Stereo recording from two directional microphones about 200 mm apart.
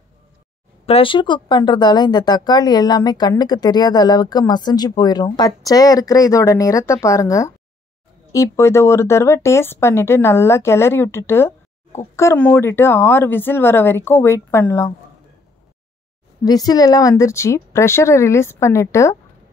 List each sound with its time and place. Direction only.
0.8 s speech: 25° left (ahead or behind)
16.4 s speech: 20° left (ahead or behind)